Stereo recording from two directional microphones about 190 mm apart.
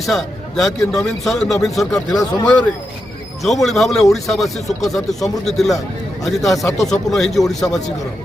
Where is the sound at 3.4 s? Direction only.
Centre (ahead or behind).